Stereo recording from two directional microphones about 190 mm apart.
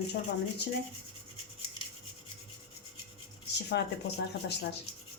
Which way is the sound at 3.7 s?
60° left (ahead or behind).